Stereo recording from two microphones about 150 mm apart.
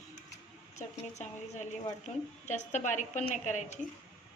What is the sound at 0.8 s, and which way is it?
A woman's voice, 50° left (ahead or behind).